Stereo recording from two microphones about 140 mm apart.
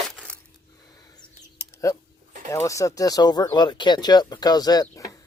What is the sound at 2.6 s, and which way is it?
Speech, 25° left (ahead or behind).